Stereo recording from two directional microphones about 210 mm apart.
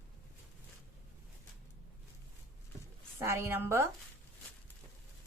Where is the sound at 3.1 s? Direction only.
10° right (ahead or behind).